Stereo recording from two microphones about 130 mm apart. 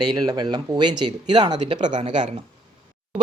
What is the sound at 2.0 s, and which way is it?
Speech, 65° right (ahead or behind).